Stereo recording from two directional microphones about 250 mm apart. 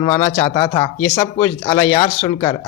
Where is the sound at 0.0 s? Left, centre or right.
Centre.